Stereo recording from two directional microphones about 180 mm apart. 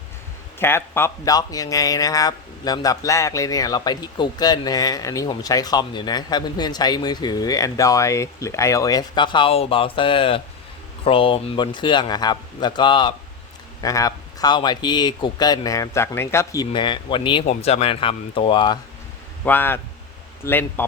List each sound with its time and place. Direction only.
0.6 s speech: 10° left (ahead or behind); by 17.4 s 30° left (ahead or behind)
17.4 s speech: 40° left (ahead or behind)
19.5 s speech: 10° left (ahead or behind)